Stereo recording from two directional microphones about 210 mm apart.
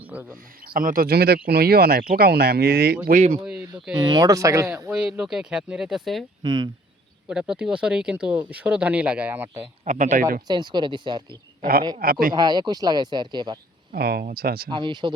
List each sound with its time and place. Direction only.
0.0 s a sound: 5° right (ahead or behind)
0.6 s speech: 40° right (ahead or behind)
3.1 s speech: 30° right (ahead or behind)
3.4 s a sound: 5° right (ahead or behind)
3.9 s speech: 20° right (ahead or behind)
4.9 s speech: 5° right (ahead or behind)
6.4 s speech: 20° right (ahead or behind)
7.3 s speech: 5° right (ahead or behind)
9.8 s speech: 40° right (ahead or behind)
10.4 s speech: 20° right (ahead or behind)
13.9 s speech: 50° right (ahead or behind)
14.7 s speech: 25° right (ahead or behind)